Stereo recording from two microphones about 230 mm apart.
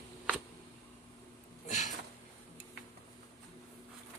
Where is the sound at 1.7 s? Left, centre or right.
Left.